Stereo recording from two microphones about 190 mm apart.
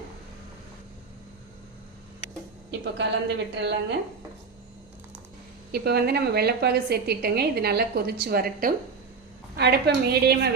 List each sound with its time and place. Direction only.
2.8 s a woman's voice: 65° right (ahead or behind)
5.7 s a woman's voice: 55° right (ahead or behind)